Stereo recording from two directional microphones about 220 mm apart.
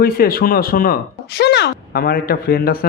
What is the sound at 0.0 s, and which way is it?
Speech, 40° left (ahead or behind).